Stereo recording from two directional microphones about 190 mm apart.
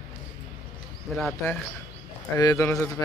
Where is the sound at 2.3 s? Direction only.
15° left (ahead or behind).